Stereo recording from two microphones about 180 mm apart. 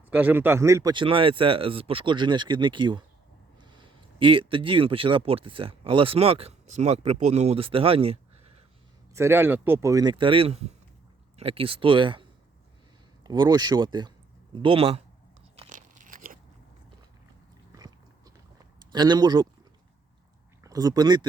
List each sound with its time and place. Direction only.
0.1 s speech: 10° right (ahead or behind); by 8.2 s 30° right (ahead or behind)
9.1 s speech: 15° right (ahead or behind)
13.2 s speech: 25° right (ahead or behind)
15.7 s crunch: 50° right (ahead or behind)
17.7 s biting: 20° right (ahead or behind)
18.9 s speech: 25° right (ahead or behind)
20.7 s speech: 20° right (ahead or behind)